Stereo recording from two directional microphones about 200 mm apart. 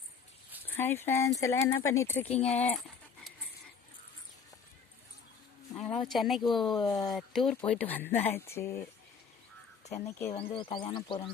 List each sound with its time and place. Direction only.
0.8 s speech: 10° left (ahead or behind)
2.2 s speech: 30° left (ahead or behind)
2.5 s speech: 5° left (ahead or behind)
5.7 s a sound: centre (ahead or behind)
6.1 s speech: centre (ahead or behind)
10.1 s speech: 15° left (ahead or behind)
10.3 s speech: 25° left (ahead or behind)